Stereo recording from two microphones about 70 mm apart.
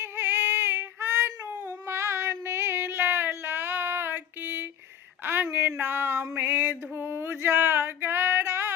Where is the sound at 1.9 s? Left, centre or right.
Right.